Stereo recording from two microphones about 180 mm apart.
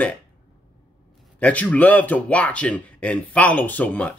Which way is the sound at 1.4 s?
10° left (ahead or behind).